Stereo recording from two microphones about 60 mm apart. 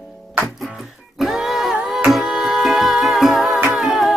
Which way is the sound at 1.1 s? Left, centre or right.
Centre.